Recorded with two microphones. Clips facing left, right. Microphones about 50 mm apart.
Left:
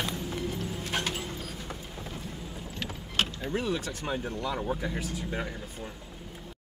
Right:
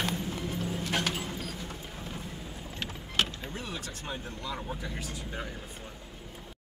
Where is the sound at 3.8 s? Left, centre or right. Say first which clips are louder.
Left 6 dB; left.